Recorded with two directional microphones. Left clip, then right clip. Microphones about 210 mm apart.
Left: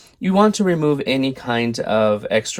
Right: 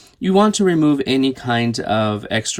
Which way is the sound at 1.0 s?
35° right (ahead or behind).